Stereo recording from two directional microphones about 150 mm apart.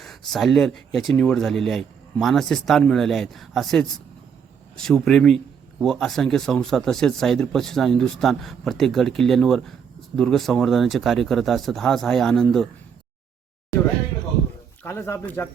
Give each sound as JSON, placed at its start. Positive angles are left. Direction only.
{"t": 0.0, "sound": "speech", "side_deg": 0}
{"t": 14.8, "sound": "speech", "side_deg": 15}